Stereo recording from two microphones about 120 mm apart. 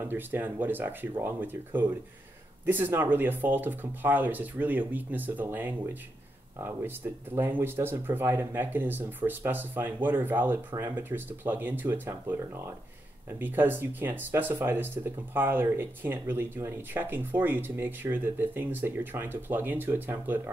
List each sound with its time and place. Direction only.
0.0 s speech: 15° right (ahead or behind)